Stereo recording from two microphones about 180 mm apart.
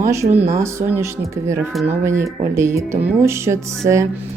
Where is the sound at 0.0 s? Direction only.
15° right (ahead or behind).